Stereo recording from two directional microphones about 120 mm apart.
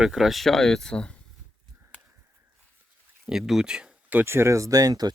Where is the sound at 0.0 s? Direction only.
5° right (ahead or behind).